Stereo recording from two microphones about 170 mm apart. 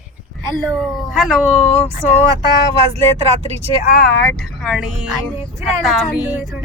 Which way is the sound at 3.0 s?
40° right (ahead or behind).